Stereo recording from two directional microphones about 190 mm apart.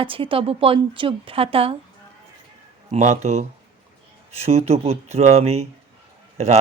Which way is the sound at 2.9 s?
40° right (ahead or behind).